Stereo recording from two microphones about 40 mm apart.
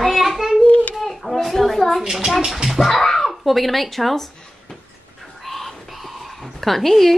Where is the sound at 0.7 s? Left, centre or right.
Left.